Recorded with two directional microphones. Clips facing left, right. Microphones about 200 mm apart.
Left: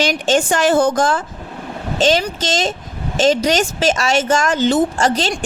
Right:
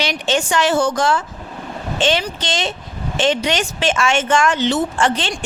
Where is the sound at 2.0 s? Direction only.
40° left (ahead or behind).